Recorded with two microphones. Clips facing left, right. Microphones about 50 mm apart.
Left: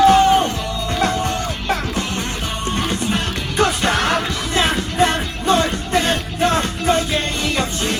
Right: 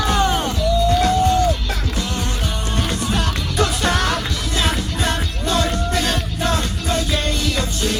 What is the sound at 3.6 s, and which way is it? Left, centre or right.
Music, left.